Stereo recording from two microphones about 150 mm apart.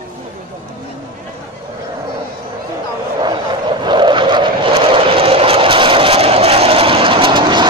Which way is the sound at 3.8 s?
30° right (ahead or behind).